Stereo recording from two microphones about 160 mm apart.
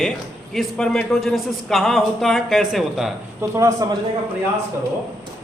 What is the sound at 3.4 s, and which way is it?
Speech, 20° right (ahead or behind).